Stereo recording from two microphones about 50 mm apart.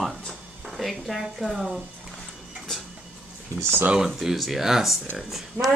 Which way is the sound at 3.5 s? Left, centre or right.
Right.